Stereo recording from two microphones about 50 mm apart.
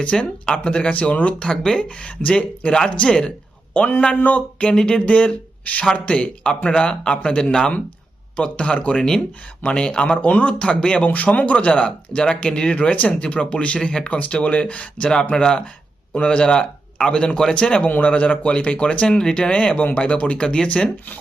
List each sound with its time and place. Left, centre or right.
0.2 s speech: centre
3.8 s a man's voice: left
4.7 s a man's voice: centre
5.0 s a man's voice: left